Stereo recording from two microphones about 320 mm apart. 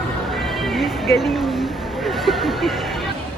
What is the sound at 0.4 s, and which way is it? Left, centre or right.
Music, centre.